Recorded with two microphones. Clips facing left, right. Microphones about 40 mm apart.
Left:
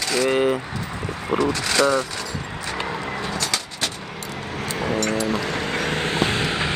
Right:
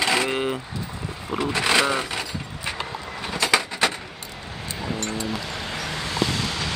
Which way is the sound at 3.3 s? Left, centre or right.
Right.